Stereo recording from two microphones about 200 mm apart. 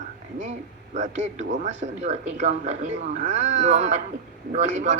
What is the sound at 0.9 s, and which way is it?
Speech, 35° right (ahead or behind).